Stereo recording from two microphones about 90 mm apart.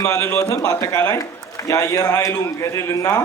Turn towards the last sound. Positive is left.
turn(degrees=35)  # may be behind; listen again after turning